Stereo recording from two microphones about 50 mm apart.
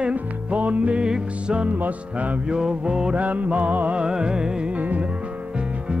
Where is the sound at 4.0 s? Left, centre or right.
Centre.